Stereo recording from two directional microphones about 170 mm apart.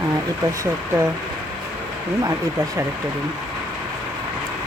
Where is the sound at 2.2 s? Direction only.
20° right (ahead or behind).